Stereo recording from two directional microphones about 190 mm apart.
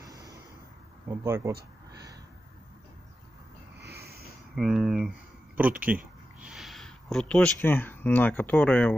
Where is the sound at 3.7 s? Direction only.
55° right (ahead or behind).